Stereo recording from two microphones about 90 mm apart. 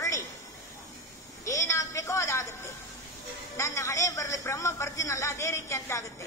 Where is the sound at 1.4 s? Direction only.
35° left (ahead or behind).